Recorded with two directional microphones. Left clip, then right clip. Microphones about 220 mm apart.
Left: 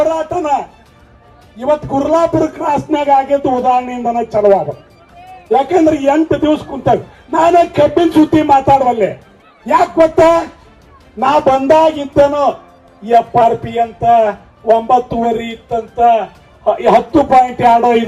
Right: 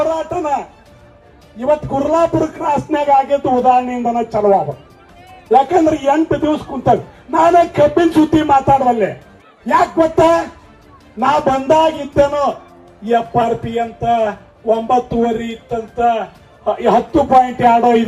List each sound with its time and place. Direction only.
0.1 s music: 50° left (ahead or behind)
1.6 s a man's voice: 40° left (ahead or behind)